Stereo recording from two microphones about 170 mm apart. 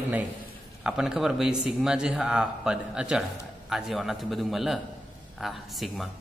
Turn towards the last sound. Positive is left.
turn(degrees=0)  # may be behind; listen again after turning